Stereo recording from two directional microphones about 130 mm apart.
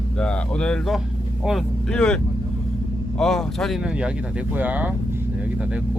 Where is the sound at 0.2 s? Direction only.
5° left (ahead or behind).